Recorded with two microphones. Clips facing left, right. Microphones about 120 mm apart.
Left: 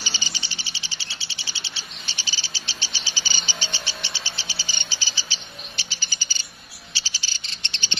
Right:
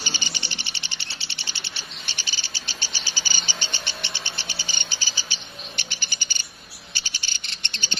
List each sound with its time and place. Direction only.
0.0 s bird: 55° right (ahead or behind)
6.9 s cricket: 55° right (ahead or behind)